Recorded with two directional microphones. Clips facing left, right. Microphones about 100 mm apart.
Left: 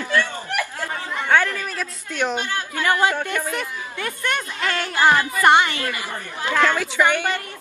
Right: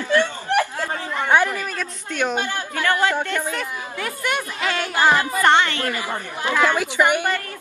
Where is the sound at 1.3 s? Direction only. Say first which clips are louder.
Right 1 dB; 15° right (ahead or behind).